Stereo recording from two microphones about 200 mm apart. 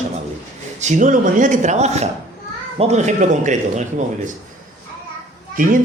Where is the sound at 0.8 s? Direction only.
40° right (ahead or behind).